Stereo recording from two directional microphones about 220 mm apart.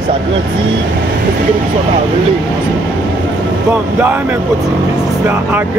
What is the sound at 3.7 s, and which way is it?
Speech, 10° right (ahead or behind).